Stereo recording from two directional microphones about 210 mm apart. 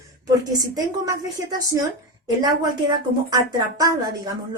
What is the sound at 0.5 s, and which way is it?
A woman's voice, 20° right (ahead or behind).